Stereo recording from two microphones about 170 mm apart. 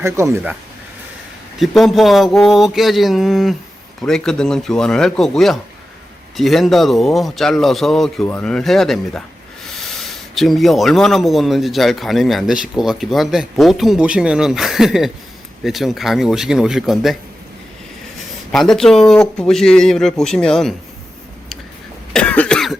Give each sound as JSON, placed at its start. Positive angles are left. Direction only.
{"t": 0.0, "sound": "speech", "side_deg": -15}
{"t": 1.5, "sound": "speech", "side_deg": 0}
{"t": 18.5, "sound": "speech", "side_deg": 5}
{"t": 22.1, "sound": "cough", "side_deg": 5}